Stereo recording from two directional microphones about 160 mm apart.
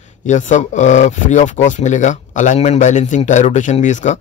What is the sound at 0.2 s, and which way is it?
Speech, 50° left (ahead or behind).